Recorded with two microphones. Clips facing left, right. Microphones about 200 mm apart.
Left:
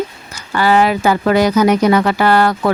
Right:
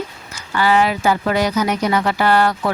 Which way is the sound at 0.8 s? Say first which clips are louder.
Left 4 dB; 70° left (ahead or behind).